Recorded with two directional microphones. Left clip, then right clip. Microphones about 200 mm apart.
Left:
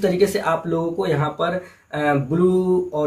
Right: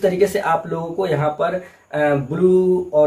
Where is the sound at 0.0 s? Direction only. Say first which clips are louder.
Right 2 dB; 10° left (ahead or behind).